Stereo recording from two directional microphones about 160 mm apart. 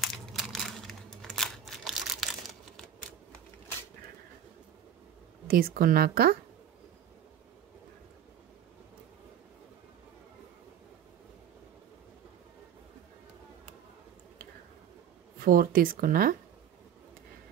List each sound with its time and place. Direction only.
0.0 s crumpling: centre (ahead or behind)
5.5 s a woman's voice: 65° right (ahead or behind)
15.3 s speech: 65° right (ahead or behind)